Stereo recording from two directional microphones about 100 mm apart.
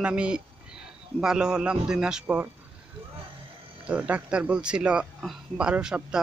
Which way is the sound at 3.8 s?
15° right (ahead or behind).